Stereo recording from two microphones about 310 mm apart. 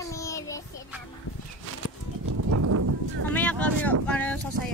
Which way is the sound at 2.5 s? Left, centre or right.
Right.